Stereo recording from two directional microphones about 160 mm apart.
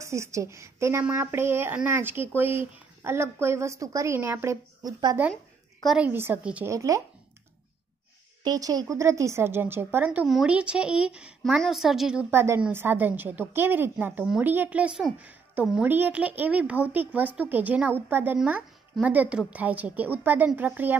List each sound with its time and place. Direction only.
0.0 s a woman's voice: 20° right (ahead or behind)
5.9 s a woman's voice: 10° right (ahead or behind)
6.7 s speech: 20° right (ahead or behind)
8.5 s a woman's voice: 25° right (ahead or behind)